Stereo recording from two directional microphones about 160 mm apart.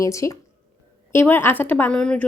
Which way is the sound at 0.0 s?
20° left (ahead or behind).